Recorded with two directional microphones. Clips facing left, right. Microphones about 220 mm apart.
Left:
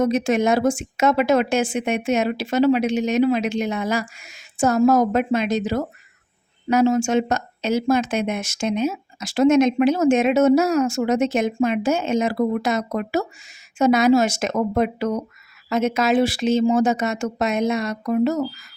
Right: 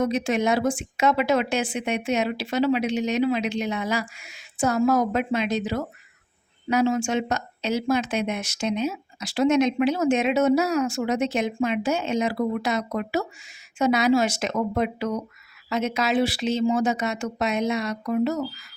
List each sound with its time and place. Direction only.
0.0 s speech: 45° left (ahead or behind)